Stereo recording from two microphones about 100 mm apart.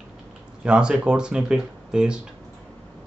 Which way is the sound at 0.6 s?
10° right (ahead or behind).